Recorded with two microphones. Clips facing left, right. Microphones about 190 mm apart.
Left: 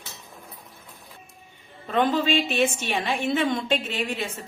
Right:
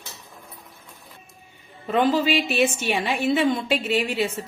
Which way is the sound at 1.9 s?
5° right (ahead or behind).